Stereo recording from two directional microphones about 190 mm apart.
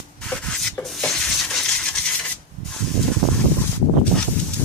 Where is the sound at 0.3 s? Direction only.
5° left (ahead or behind).